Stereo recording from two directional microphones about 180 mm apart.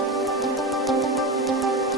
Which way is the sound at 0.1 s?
Centre (ahead or behind).